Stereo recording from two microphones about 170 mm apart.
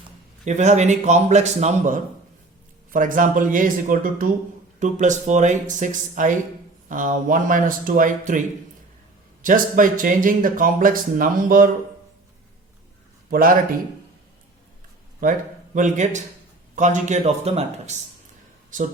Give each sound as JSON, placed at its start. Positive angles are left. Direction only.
{"t": 0.4, "sound": "speech", "side_deg": -45}
{"t": 9.4, "sound": "speech", "side_deg": -50}
{"t": 13.3, "sound": "a man's voice", "side_deg": -55}
{"t": 15.2, "sound": "speech", "side_deg": -50}